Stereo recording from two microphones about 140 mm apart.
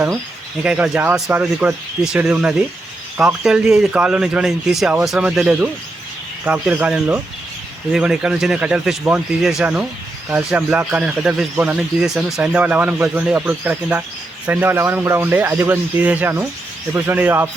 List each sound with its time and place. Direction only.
0.6 s speech: 10° right (ahead or behind)